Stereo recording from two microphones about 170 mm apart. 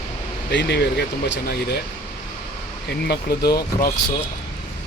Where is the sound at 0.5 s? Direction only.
75° left (ahead or behind).